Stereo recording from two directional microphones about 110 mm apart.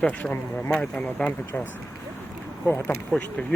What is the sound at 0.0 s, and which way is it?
Speech, 10° left (ahead or behind).